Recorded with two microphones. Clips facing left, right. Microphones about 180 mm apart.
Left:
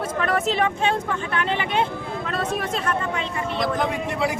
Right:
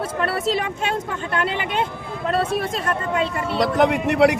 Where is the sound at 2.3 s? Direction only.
40° right (ahead or behind).